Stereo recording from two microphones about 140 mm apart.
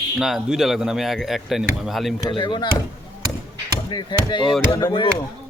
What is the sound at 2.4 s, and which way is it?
Speech, 35° left (ahead or behind).